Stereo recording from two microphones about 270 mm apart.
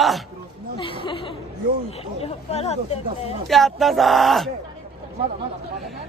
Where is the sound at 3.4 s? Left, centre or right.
Centre.